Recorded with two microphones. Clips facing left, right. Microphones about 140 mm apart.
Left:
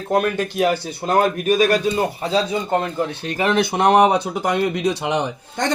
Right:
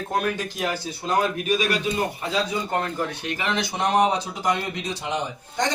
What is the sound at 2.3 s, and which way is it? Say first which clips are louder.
Speech: left 6 dB; 25° left (ahead or behind).